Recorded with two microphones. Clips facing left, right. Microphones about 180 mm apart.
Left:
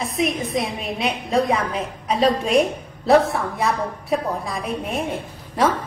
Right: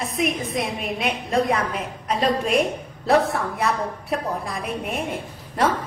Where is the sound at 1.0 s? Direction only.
30° left (ahead or behind).